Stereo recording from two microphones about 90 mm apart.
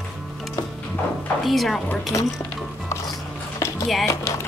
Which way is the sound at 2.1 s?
35° left (ahead or behind).